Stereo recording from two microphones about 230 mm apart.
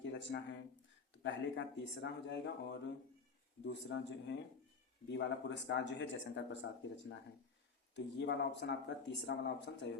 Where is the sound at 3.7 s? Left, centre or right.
Left.